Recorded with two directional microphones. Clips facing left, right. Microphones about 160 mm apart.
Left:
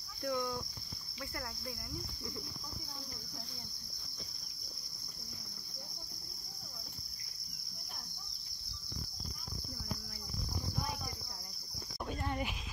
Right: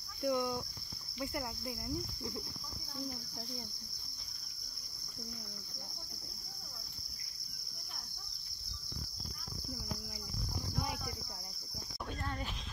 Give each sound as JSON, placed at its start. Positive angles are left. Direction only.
{"t": 0.2, "sound": "speech", "side_deg": -20}
{"t": 1.2, "sound": "insect", "side_deg": -20}
{"t": 12.1, "sound": "speech", "side_deg": 10}